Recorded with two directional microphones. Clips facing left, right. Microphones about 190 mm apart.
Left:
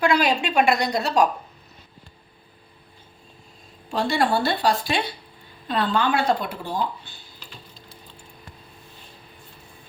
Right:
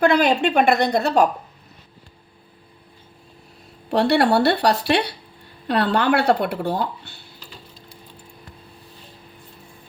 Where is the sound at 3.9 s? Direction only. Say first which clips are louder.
Right 5 dB; 65° right (ahead or behind).